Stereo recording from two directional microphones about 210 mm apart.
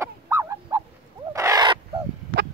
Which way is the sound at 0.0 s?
10° right (ahead or behind).